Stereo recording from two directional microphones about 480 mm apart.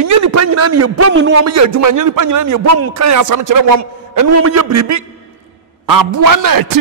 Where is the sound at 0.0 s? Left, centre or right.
Right.